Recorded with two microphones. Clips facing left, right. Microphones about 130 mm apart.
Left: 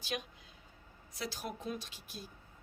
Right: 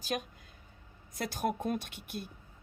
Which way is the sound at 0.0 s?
45° right (ahead or behind).